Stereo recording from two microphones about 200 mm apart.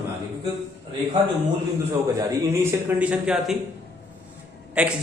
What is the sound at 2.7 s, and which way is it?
Speech, 5° right (ahead or behind).